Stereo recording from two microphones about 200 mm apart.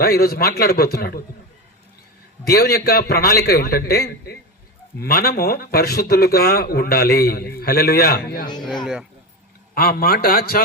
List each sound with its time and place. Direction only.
0.0 s speech: 50° left (ahead or behind)
2.5 s speech: 50° left (ahead or behind)
8.6 s speech: centre (ahead or behind)
9.7 s speech: 45° left (ahead or behind)